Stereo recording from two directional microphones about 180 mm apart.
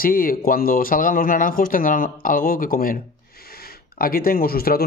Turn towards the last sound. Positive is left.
turn(degrees=55)  # may be behind; listen again after turning